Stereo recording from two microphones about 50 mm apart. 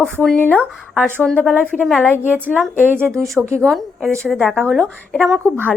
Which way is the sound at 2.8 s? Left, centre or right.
Right.